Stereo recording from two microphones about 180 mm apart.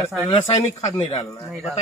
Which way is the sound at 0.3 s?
30° left (ahead or behind).